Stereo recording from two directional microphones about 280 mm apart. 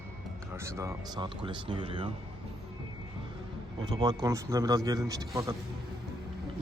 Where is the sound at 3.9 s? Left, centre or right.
Centre.